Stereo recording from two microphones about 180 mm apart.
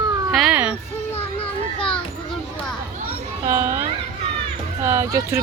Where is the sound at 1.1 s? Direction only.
30° left (ahead or behind).